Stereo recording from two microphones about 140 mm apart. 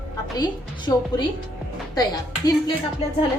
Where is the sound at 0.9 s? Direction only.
25° left (ahead or behind).